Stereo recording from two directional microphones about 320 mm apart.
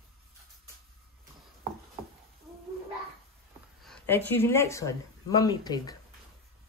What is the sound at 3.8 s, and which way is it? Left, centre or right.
Speech, centre.